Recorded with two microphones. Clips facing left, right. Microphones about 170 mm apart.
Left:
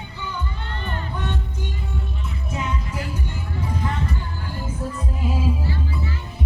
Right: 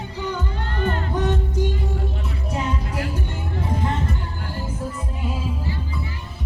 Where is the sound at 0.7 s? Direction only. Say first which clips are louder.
Right 8 dB; 80° right.